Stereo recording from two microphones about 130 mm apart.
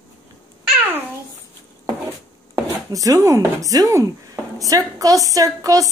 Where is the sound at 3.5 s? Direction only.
25° right (ahead or behind).